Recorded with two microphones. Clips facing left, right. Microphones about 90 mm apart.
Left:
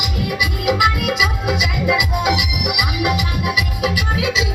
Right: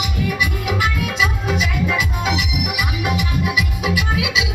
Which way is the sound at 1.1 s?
15° left (ahead or behind).